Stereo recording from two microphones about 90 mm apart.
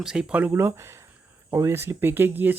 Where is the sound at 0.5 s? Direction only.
30° right (ahead or behind).